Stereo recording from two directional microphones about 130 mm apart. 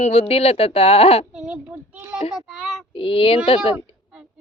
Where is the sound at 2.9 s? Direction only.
45° left (ahead or behind).